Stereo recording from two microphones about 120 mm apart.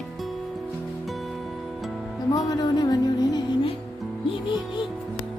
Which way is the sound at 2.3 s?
35° left (ahead or behind).